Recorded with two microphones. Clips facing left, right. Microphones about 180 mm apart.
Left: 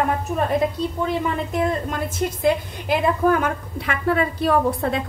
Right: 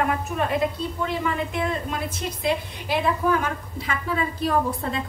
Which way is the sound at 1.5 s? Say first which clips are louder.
Left 4 dB; 40° left (ahead or behind).